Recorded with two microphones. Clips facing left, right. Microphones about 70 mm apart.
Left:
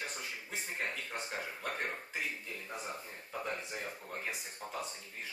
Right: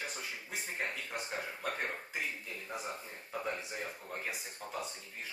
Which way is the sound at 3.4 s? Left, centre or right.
Centre.